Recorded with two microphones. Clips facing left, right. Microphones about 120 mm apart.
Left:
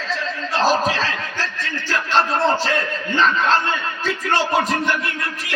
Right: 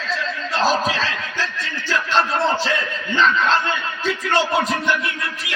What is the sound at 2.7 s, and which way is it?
Speech, 45° left (ahead or behind).